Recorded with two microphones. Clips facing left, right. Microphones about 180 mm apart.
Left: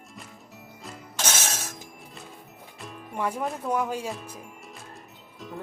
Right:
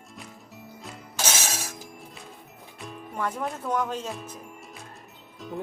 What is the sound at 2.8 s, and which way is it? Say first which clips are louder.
Speech: left 1 dB; 5° left (ahead or behind).